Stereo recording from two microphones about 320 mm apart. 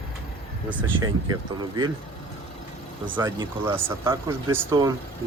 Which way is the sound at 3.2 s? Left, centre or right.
Centre.